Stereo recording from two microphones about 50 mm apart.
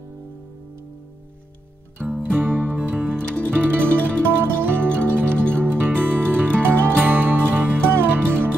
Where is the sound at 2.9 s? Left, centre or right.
Right.